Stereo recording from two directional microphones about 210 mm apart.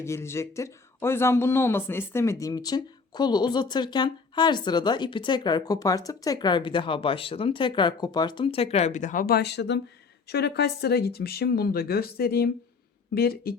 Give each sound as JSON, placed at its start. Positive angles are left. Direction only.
{"t": 0.0, "sound": "speech", "side_deg": 10}